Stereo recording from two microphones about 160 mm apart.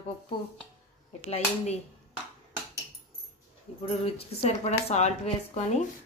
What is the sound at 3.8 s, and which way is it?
Speech, 35° left (ahead or behind).